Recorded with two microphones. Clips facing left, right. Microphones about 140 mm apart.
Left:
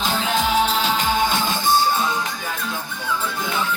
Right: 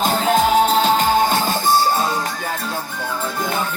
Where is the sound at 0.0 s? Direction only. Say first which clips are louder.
Right 5 dB; 45° right (ahead or behind).